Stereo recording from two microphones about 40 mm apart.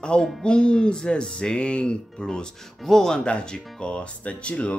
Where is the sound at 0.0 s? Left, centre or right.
Left.